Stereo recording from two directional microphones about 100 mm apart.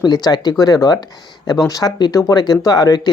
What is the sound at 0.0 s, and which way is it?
Speech, 45° left (ahead or behind).